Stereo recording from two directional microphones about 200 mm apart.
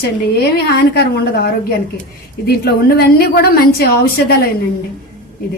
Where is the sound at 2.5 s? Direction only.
50° left (ahead or behind).